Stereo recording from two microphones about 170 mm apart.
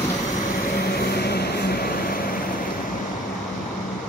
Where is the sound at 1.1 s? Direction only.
70° left (ahead or behind).